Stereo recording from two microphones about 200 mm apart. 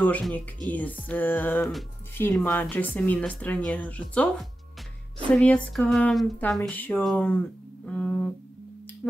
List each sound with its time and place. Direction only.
0.0 s speech: 5° left (ahead or behind)
5.3 s speech: 5° left (ahead or behind)
7.8 s music: 5° left (ahead or behind)